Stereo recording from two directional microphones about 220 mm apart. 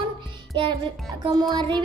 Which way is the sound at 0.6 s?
20° right (ahead or behind).